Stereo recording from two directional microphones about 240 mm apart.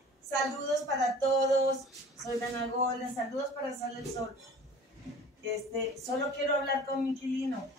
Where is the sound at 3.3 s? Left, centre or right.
Left.